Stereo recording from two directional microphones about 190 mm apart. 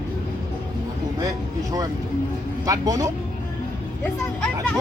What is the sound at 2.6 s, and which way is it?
Speech, 20° right (ahead or behind).